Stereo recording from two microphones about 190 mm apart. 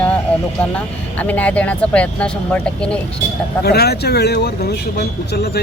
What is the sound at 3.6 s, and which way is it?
Speech, 55° left (ahead or behind).